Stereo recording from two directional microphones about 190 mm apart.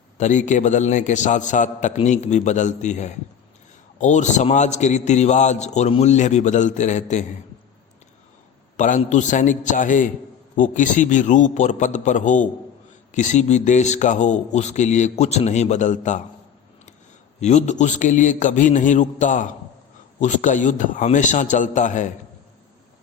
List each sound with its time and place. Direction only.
0.2 s a man's voice: 40° left (ahead or behind)
8.7 s a man's voice: 40° left (ahead or behind)
17.4 s a man's voice: 40° left (ahead or behind)